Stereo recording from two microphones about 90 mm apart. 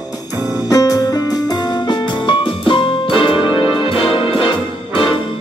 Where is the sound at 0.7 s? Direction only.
40° left (ahead or behind); by 3.4 s 75° left (ahead or behind).